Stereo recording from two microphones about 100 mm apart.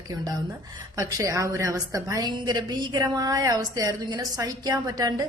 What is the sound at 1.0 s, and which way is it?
A woman's voice, 35° right (ahead or behind).